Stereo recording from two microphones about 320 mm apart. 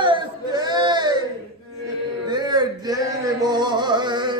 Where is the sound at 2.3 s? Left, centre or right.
Centre.